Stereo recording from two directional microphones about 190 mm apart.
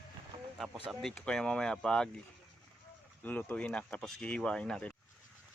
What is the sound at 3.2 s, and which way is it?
Speech, 10° left (ahead or behind).